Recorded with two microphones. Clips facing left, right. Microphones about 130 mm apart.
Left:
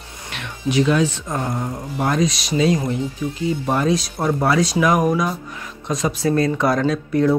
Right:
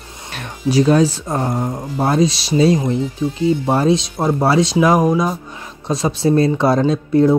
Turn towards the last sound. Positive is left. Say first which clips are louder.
# right 4 dB
turn(degrees=-25)  # may be behind; listen again after turning